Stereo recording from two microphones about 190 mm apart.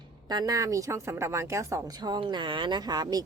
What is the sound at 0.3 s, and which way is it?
A woman's voice, 20° right (ahead or behind).